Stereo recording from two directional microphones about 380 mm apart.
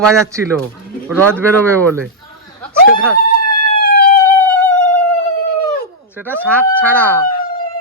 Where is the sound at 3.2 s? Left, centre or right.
Left.